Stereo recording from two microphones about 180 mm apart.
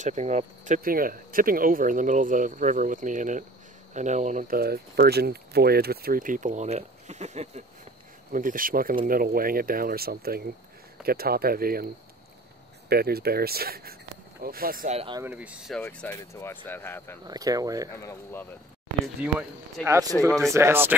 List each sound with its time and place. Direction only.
0.0 s speech: 40° right (ahead or behind)
12.9 s speech: 60° right (ahead or behind)
14.9 s speech: 35° right (ahead or behind)
15.1 s speech: 10° right (ahead or behind)
15.8 s speech: 10° left (ahead or behind)
17.3 s speech: 20° right (ahead or behind)
17.9 s speech: 15° left (ahead or behind)
19.8 s speech: 15° right (ahead or behind)